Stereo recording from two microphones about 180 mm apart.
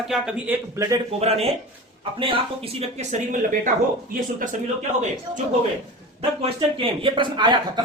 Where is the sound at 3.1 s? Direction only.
45° right (ahead or behind).